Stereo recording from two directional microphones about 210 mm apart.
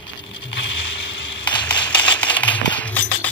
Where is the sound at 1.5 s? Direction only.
5° left (ahead or behind).